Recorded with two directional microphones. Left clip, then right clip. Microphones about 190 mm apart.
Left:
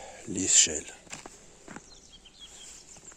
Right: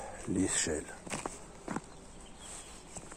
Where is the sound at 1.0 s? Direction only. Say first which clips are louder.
Right 5 dB; 60° right (ahead or behind).